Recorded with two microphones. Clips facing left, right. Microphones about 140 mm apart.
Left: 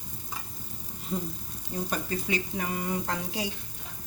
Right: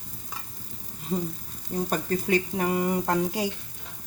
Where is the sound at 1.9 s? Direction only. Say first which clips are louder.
Right 6 dB; 50° right (ahead or behind).